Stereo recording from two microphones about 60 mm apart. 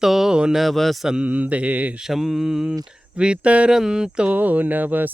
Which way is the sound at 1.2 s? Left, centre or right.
Right.